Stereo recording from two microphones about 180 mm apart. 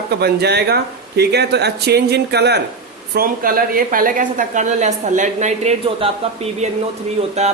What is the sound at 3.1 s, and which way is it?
A woman's voice, 55° right (ahead or behind).